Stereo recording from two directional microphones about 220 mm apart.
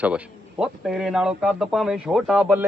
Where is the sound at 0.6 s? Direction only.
5° right (ahead or behind).